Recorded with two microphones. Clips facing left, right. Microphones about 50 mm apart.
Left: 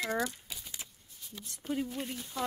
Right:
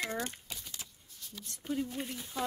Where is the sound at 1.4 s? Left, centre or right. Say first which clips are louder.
Left 1 dB; centre.